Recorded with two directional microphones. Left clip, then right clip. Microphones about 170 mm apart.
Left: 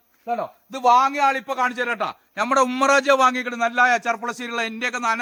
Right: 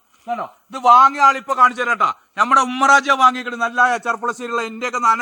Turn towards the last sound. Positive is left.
turn(degrees=-10)  # may be behind; listen again after turning